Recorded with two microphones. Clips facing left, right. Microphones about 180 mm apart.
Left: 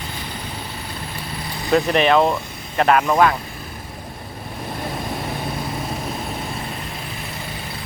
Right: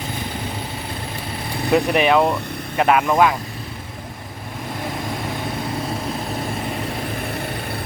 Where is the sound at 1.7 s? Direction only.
10° right (ahead or behind).